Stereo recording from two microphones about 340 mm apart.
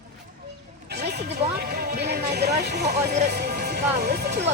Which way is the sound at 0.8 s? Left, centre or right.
Right.